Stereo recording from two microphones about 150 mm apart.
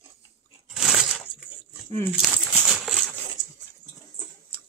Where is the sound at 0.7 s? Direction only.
5° right (ahead or behind).